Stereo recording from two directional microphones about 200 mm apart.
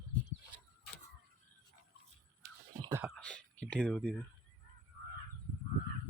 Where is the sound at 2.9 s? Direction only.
Centre (ahead or behind).